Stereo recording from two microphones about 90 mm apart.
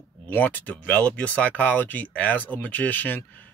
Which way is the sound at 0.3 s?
20° left (ahead or behind).